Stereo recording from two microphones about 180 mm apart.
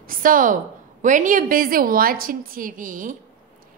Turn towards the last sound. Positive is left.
turn(degrees=-50)  # may be behind; listen again after turning